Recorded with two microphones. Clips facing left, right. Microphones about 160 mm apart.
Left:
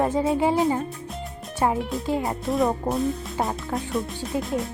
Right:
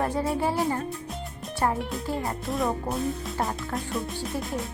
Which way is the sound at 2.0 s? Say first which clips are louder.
Left 5 dB; 20° left (ahead or behind).